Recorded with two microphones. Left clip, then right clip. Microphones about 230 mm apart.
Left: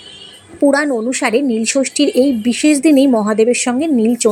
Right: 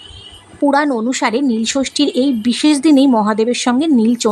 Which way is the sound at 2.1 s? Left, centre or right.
Right.